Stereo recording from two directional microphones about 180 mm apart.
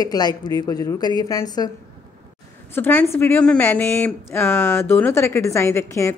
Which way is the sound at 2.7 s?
10° left (ahead or behind).